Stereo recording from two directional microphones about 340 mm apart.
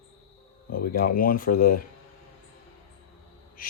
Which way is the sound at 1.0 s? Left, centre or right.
Left.